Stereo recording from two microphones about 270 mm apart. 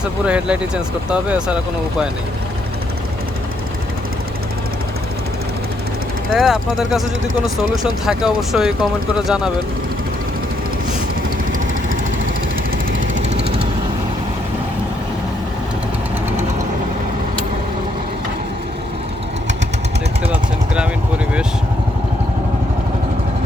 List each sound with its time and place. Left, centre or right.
0.0 s speech: centre
6.3 s speech: centre
8.0 s speech: centre
13.0 s jackhammer: right